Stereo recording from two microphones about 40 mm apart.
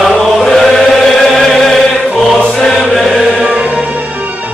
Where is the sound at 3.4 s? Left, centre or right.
Right.